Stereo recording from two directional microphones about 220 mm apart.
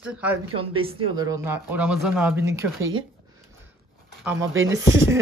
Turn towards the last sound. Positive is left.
turn(degrees=-60)  # may be behind; listen again after turning